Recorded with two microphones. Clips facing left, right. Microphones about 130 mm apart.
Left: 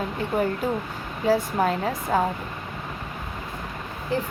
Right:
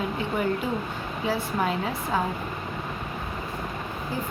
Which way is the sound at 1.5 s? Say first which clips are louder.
Left 3 dB; 40° left (ahead or behind).